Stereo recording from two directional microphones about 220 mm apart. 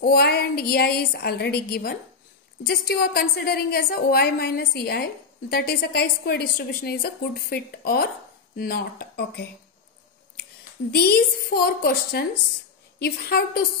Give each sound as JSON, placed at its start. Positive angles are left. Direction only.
{"t": 0.0, "sound": "a woman's voice", "side_deg": 45}
{"t": 10.9, "sound": "a woman's voice", "side_deg": 45}